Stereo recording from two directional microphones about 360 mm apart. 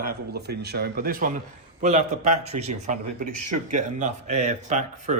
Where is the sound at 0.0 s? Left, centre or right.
Right.